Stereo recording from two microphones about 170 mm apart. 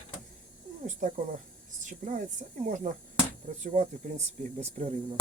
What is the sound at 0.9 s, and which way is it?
Speech, 50° right (ahead or behind).